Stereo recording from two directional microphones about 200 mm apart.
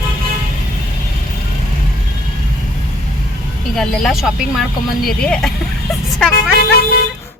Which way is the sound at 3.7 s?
Centre (ahead or behind).